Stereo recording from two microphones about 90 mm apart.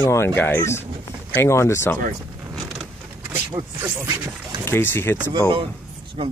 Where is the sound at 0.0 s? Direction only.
30° left (ahead or behind).